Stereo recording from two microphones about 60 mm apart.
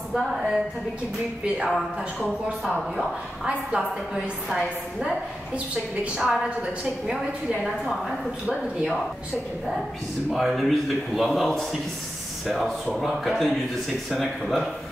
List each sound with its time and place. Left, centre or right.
0.1 s a man's voice: centre
3.4 s a woman's voice: centre
6.2 s a man's voice: centre
10.3 s a man's voice: centre